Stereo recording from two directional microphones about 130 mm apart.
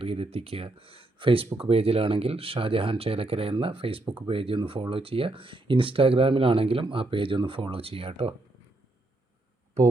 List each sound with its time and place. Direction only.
0.0 s speech: 45° right (ahead or behind)